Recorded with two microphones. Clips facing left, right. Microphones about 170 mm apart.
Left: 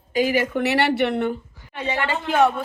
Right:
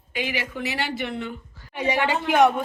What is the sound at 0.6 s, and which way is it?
Speech, 65° left (ahead or behind).